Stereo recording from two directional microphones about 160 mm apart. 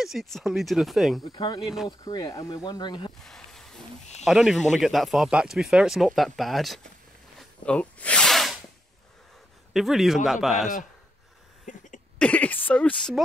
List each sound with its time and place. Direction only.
0.0 s speech: centre (ahead or behind)
1.2 s speech: 25° left (ahead or behind)
3.2 s a sound: centre (ahead or behind)
4.2 s speech: centre (ahead or behind)
7.3 s sneeze: 5° left (ahead or behind)
9.8 s speech: centre (ahead or behind)
11.7 s cough: 50° left (ahead or behind)
12.2 s a woman's voice: 10° left (ahead or behind)